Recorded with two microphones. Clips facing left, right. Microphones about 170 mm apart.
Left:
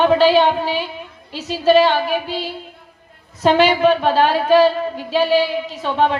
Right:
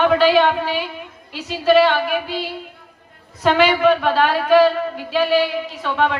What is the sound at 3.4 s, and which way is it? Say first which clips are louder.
A woman's voice: left 1 dB; 30° left (ahead or behind).